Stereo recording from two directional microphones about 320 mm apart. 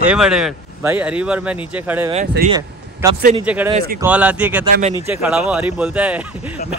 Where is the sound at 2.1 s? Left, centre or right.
Right.